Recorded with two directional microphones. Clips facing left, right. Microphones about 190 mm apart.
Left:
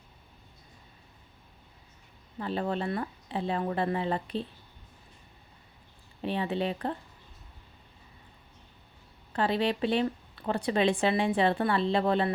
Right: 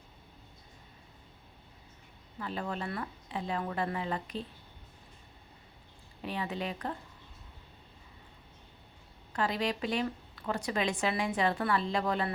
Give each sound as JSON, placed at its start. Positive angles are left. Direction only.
{"t": 2.4, "sound": "a woman's voice", "side_deg": 30}
{"t": 6.2, "sound": "speech", "side_deg": 30}
{"t": 9.3, "sound": "a woman's voice", "side_deg": 30}